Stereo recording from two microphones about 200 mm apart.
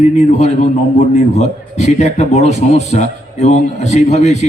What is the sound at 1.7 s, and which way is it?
A man's voice, 35° left (ahead or behind).